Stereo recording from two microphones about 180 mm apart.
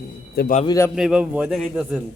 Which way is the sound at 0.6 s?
20° left (ahead or behind).